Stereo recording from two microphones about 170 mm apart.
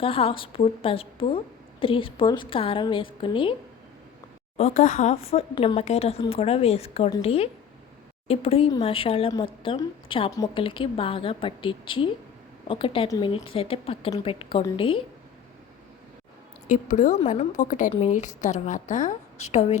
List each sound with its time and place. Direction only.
0.0 s speech: 35° left (ahead or behind)
4.5 s speech: 45° left (ahead or behind)
10.3 s a woman's voice: 20° left (ahead or behind)
10.6 s speech: 30° left (ahead or behind)
16.6 s a woman's voice: 50° left (ahead or behind)